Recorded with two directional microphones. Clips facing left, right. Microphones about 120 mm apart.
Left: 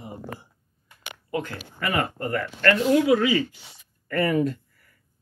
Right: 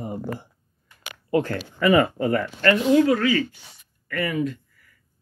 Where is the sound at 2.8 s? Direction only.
5° left (ahead or behind).